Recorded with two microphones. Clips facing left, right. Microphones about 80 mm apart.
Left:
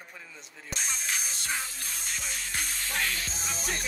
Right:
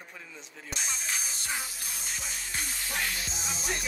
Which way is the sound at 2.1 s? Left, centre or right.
Left.